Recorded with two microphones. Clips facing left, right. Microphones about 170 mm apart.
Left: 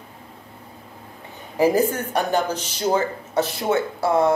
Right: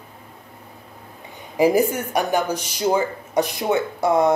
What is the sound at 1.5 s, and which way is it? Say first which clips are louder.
A woman's voice: right 1 dB; 15° right (ahead or behind).